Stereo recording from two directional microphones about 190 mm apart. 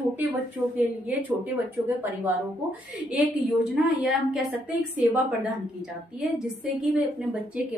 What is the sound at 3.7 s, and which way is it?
A woman's voice, 5° right (ahead or behind).